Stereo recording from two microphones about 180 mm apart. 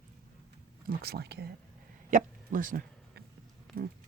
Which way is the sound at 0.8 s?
60° right (ahead or behind).